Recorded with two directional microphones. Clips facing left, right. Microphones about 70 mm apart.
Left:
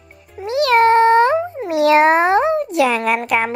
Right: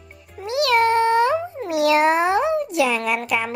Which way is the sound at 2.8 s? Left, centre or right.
Left.